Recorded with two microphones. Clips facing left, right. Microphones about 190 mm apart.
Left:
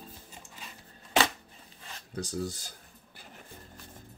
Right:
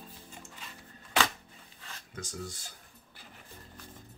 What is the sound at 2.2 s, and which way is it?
Speech, 35° left (ahead or behind).